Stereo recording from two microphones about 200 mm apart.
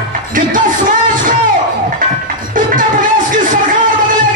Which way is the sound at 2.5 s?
40° right (ahead or behind).